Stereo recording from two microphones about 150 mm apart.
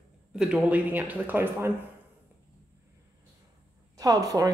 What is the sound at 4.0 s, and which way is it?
Speech, 25° right (ahead or behind).